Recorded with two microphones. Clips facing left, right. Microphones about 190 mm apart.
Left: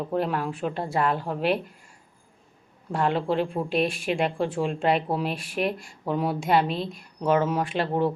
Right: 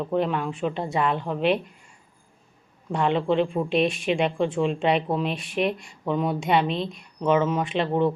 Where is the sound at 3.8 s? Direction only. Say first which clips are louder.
Right 2 dB; 55° left (ahead or behind).